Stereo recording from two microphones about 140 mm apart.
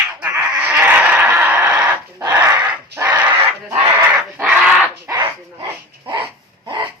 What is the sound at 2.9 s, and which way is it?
Bird, 10° right (ahead or behind).